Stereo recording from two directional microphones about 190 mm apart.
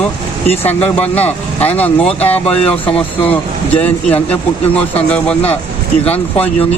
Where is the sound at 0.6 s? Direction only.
10° left (ahead or behind).